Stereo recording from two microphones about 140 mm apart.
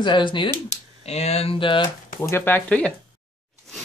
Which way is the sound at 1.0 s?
50° left (ahead or behind).